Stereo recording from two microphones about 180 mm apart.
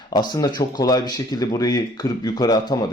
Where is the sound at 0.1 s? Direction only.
20° left (ahead or behind).